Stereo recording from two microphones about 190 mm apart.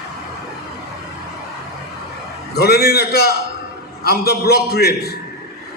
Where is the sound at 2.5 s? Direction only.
55° left (ahead or behind).